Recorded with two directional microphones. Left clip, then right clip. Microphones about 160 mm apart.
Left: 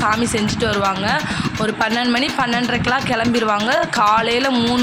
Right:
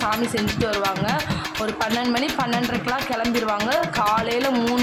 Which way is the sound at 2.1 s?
10° left (ahead or behind).